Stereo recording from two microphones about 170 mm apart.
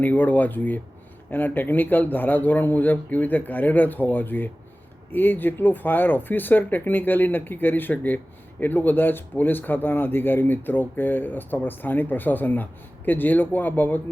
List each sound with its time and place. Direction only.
0.0 s speech: 10° left (ahead or behind)